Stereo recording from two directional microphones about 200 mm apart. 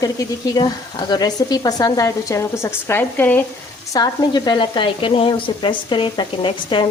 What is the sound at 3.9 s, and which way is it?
Sizzle, 20° left (ahead or behind).